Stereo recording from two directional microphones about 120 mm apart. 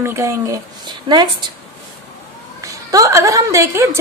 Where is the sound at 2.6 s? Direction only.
30° right (ahead or behind).